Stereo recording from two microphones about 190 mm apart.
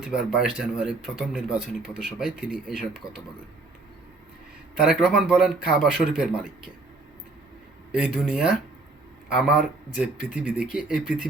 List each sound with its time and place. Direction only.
0.0 s speech: 5° right (ahead or behind)
4.8 s speech: 5° right (ahead or behind)
7.9 s speech: 5° right (ahead or behind)